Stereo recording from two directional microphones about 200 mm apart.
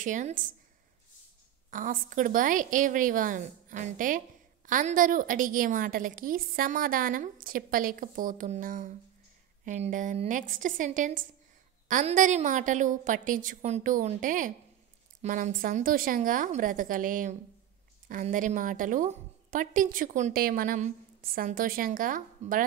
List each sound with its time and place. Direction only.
0.0 s a woman's voice: 40° right (ahead or behind)
1.7 s a woman's voice: 40° right (ahead or behind)